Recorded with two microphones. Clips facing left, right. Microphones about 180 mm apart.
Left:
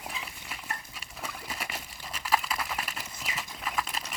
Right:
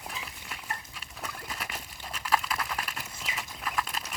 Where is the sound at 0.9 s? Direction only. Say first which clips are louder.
Even; 5° left (ahead or behind).